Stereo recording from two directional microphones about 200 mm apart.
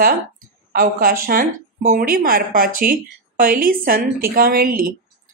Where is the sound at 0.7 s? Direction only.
45° right (ahead or behind).